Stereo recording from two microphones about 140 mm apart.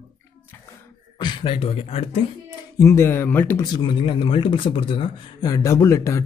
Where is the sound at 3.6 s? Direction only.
30° left (ahead or behind).